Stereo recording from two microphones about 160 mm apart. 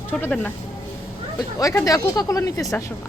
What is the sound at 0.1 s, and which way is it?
Speech, 10° left (ahead or behind).